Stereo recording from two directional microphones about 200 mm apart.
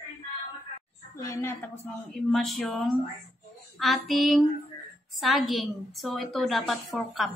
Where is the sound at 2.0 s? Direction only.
Centre (ahead or behind).